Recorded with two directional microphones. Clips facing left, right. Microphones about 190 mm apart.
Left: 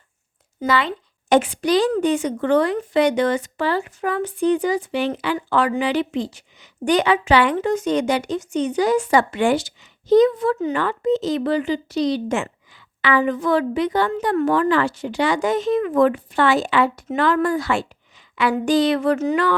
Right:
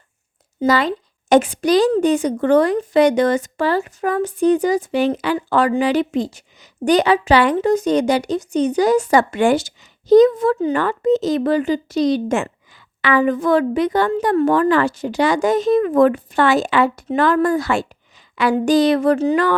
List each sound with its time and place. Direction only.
0.7 s a woman's voice: 40° right (ahead or behind)